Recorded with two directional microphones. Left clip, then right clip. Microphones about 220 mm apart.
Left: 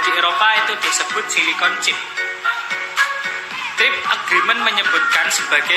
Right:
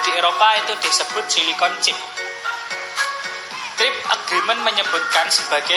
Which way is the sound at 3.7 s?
Centre (ahead or behind).